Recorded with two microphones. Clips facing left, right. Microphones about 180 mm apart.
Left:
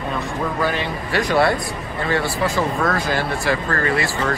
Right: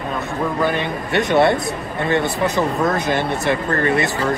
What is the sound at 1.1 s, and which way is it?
Speech, 25° right (ahead or behind).